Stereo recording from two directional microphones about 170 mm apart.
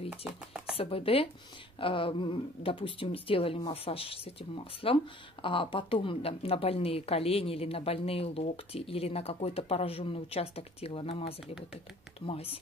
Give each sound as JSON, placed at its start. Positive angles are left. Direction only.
{"t": 0.1, "sound": "speech", "side_deg": -5}
{"t": 0.7, "sound": "speech", "side_deg": 35}